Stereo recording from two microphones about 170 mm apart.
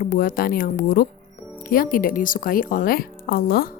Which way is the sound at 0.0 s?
55° left (ahead or behind).